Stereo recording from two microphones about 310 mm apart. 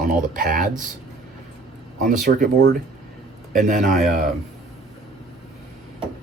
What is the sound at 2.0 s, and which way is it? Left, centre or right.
Speech, right.